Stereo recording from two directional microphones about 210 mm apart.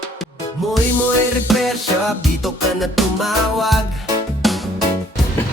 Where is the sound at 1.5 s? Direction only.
Centre (ahead or behind).